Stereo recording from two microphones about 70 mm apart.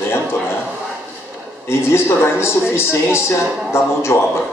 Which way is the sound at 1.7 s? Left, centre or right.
Left.